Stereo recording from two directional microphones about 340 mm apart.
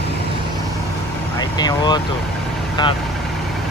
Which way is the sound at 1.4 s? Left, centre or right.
Centre.